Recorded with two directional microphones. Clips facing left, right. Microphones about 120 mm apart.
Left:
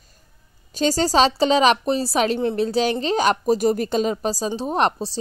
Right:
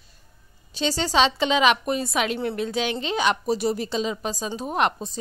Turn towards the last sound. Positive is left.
turn(degrees=30)  # may be behind; listen again after turning